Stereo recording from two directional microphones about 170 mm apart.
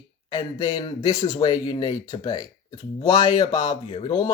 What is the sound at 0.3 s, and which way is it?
Speech, 25° left (ahead or behind).